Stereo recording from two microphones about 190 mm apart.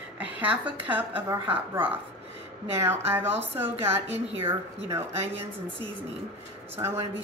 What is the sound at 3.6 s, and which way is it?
Speech, 10° right (ahead or behind).